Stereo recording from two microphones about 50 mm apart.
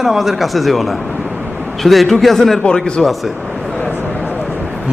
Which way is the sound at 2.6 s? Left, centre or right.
Centre.